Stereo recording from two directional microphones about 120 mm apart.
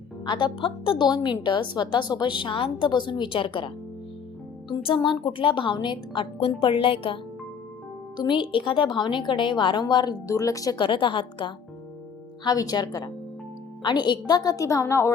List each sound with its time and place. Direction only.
0.3 s a woman's voice: 40° left (ahead or behind)
4.7 s a woman's voice: 45° left (ahead or behind); by 10.8 s 30° left (ahead or behind)
10.8 s a woman's voice: 45° left (ahead or behind); by 15.1 s 25° left (ahead or behind)